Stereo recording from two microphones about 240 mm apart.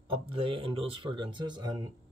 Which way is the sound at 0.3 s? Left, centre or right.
Right.